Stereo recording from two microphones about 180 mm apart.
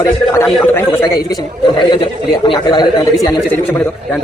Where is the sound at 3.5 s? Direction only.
10° left (ahead or behind).